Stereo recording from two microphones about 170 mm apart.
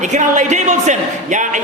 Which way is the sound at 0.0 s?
45° right (ahead or behind).